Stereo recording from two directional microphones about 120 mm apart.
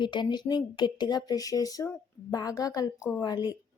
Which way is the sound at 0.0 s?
40° left (ahead or behind).